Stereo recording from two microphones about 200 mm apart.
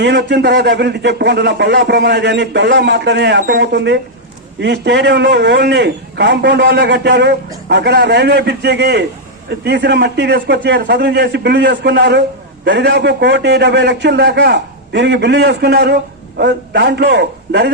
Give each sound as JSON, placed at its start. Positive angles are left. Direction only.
{"t": 0.0, "sound": "speech", "side_deg": -60}